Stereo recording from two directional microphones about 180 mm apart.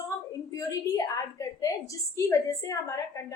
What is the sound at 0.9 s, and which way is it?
A woman's voice, 20° left (ahead or behind).